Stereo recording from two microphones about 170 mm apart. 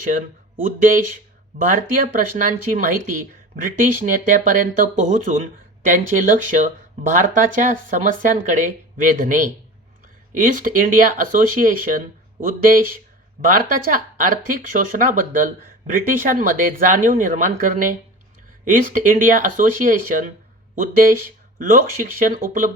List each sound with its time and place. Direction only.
0.0 s speech: 50° right (ahead or behind)